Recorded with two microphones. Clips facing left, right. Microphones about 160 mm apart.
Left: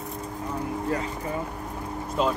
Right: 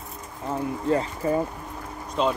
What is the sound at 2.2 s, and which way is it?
Speech, 5° left (ahead or behind).